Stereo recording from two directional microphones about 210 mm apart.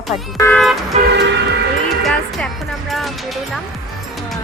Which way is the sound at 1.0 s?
55° right (ahead or behind).